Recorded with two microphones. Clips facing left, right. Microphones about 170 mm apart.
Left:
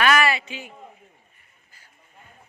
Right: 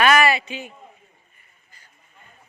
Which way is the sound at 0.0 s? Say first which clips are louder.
Right 3 dB; 20° right (ahead or behind).